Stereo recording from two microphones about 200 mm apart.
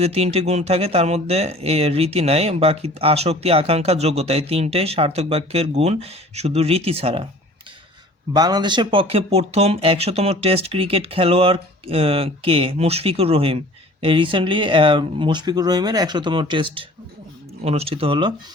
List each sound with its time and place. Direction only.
0.0 s speech: 30° right (ahead or behind)
8.3 s speech: 20° right (ahead or behind)